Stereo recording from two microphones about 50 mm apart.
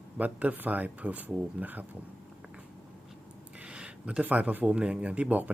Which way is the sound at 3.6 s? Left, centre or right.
Centre.